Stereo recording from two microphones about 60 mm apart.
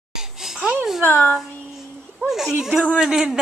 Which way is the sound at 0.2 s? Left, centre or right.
Centre.